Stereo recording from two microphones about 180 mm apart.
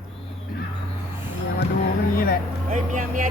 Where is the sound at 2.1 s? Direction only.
55° left (ahead or behind).